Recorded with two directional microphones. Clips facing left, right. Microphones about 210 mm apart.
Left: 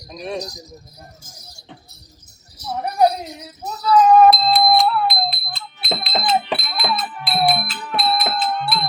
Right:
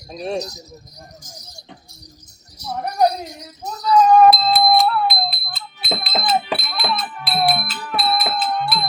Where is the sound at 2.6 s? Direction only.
5° left (ahead or behind).